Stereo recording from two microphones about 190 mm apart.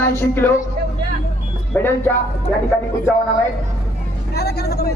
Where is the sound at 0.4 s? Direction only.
10° left (ahead or behind).